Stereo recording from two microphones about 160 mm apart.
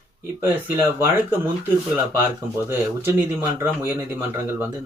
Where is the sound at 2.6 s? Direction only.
15° right (ahead or behind).